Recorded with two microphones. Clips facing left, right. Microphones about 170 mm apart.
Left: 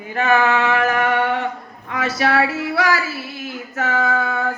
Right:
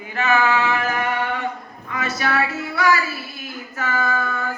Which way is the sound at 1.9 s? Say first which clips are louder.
Left 4 dB; 75° left (ahead or behind).